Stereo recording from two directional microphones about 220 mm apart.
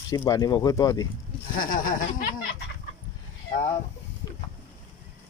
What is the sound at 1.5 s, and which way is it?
Speech, 40° left (ahead or behind).